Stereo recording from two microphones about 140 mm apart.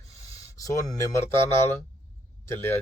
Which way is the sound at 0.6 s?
25° left (ahead or behind).